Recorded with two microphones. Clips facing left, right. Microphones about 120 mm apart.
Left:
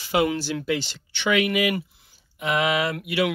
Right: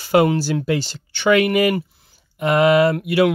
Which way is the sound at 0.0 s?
50° right (ahead or behind).